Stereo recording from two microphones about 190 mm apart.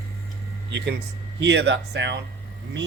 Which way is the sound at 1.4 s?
70° right (ahead or behind).